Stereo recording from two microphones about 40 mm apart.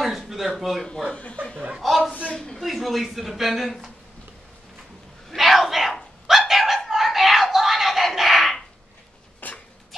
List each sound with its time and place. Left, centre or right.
0.0 s a sound: centre
1.1 s speech: left
1.8 s a man's voice: centre
2.3 s a man's voice: centre
2.6 s a man's voice: centre
5.3 s a man's voice: centre
6.2 s dog: centre
9.4 s a sound: left